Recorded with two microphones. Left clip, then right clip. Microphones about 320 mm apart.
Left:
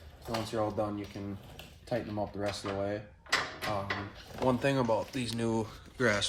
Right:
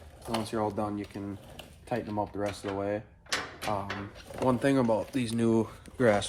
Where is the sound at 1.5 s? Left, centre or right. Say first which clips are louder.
Right 1 dB; right.